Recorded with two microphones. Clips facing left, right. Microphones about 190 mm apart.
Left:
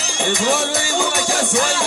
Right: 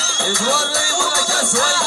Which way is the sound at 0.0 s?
15° left (ahead or behind).